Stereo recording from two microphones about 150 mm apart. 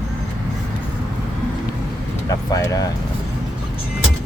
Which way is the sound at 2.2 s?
20° left (ahead or behind).